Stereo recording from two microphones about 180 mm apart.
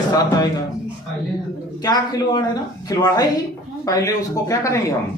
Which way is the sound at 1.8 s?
20° left (ahead or behind).